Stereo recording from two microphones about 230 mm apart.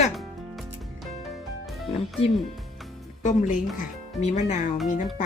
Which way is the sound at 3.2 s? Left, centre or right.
Left.